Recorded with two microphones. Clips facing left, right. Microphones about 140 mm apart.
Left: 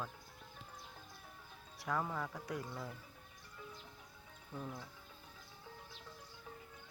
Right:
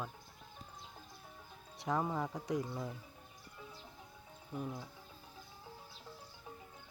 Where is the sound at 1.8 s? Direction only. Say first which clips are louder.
Right 3 dB; 20° right (ahead or behind).